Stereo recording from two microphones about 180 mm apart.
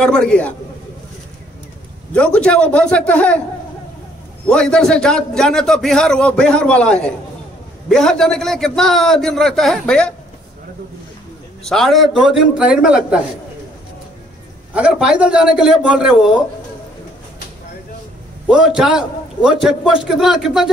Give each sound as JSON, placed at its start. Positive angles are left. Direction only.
{"t": 0.0, "sound": "a man's voice", "side_deg": 5}
{"t": 2.1, "sound": "a man's voice", "side_deg": 5}
{"t": 4.5, "sound": "a man's voice", "side_deg": 5}
{"t": 11.6, "sound": "a man's voice", "side_deg": 0}
{"t": 14.7, "sound": "a man's voice", "side_deg": -5}
{"t": 18.5, "sound": "a man's voice", "side_deg": -5}